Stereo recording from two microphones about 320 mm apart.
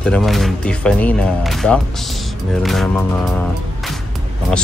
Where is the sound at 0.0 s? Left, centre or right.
Centre.